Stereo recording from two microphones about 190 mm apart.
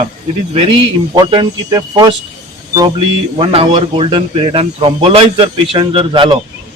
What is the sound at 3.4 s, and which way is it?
Speech, 30° right (ahead or behind).